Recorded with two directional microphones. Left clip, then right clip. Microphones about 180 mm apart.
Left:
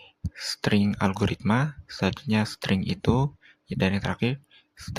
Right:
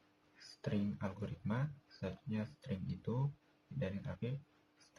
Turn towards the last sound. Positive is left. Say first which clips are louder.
# left 18 dB
turn(degrees=75)  # may be behind; listen again after turning